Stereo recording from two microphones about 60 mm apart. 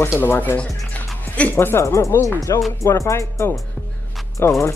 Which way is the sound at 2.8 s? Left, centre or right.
Left.